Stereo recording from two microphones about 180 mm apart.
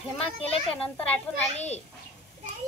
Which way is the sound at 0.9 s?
10° left (ahead or behind).